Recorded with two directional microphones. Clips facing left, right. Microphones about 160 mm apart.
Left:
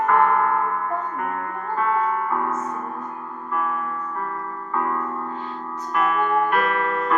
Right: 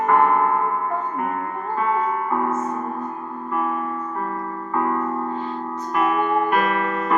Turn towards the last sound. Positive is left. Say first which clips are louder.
# right 1 dB
turn(degrees=-10)  # may be behind; listen again after turning